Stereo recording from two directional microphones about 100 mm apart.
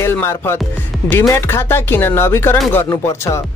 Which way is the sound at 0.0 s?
25° left (ahead or behind).